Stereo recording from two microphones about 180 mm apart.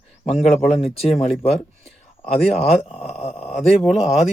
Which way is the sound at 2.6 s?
35° left (ahead or behind).